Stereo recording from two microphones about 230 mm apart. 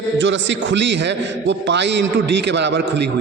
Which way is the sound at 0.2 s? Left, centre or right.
Right.